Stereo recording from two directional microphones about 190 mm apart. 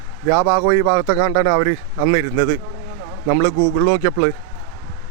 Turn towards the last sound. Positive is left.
turn(degrees=-10)  # may be behind; listen again after turning